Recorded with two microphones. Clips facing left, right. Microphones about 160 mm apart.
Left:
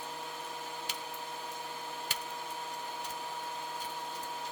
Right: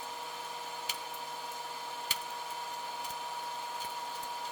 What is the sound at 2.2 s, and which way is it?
Printer, centre (ahead or behind).